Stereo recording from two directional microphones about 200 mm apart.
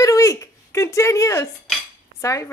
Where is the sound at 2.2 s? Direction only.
15° left (ahead or behind).